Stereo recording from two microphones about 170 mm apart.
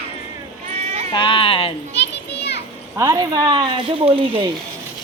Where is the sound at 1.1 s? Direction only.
30° left (ahead or behind).